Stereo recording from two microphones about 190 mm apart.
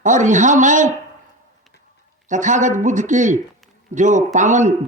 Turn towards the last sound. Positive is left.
turn(degrees=-40)  # may be behind; listen again after turning